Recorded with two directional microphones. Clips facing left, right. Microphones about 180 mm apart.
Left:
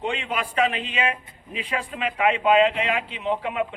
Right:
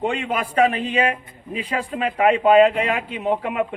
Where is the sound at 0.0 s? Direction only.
45° right (ahead or behind).